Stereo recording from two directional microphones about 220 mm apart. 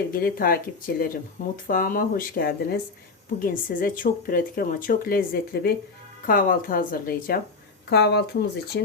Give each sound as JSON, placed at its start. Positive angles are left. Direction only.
{"t": 0.1, "sound": "speech", "side_deg": 40}